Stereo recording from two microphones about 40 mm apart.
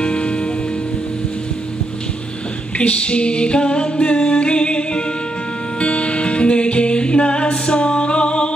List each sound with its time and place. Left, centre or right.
0.0 s music: left
2.8 s female singing: left
5.8 s music: left